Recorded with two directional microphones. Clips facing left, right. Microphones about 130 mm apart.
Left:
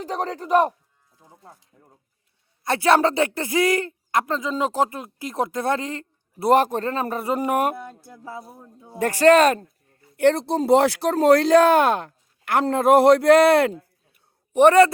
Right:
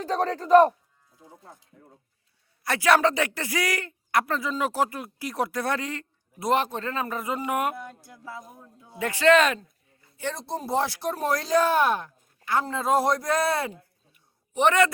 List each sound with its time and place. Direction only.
0.0 s speech: 15° left (ahead or behind)
2.6 s speech: 25° left (ahead or behind)
6.5 s speech: 40° left (ahead or behind)
10.2 s speech: 65° left (ahead or behind)
14.5 s speech: 40° left (ahead or behind)